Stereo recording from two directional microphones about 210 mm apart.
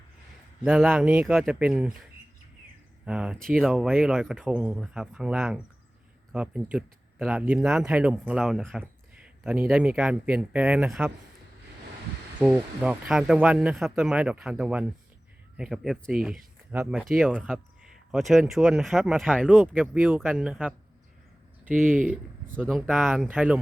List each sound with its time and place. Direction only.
0.6 s speech: 5° right (ahead or behind)
3.1 s speech: 5° right (ahead or behind)
12.5 s speech: 5° right (ahead or behind)
21.7 s speech: 40° right (ahead or behind)
22.0 s speech: 5° right (ahead or behind)